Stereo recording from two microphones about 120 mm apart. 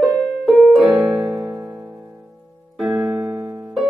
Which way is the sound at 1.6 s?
20° right (ahead or behind).